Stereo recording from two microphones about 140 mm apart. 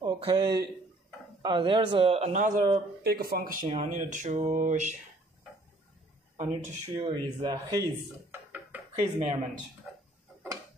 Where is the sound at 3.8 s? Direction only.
65° right (ahead or behind).